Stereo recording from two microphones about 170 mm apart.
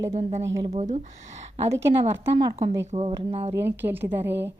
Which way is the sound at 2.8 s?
40° right (ahead or behind).